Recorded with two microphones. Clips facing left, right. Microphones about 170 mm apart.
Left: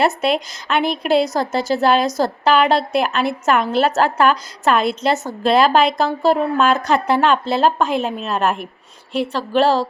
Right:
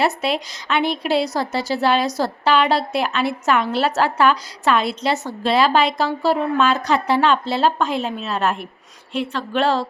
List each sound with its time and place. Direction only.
0.0 s a woman's voice: 50° left (ahead or behind)